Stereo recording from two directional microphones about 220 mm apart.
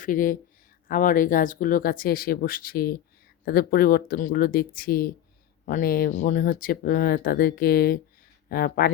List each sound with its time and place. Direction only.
0.0 s speech: 40° left (ahead or behind)